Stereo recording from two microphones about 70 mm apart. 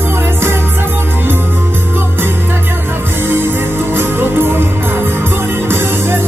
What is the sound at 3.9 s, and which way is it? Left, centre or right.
Music, right.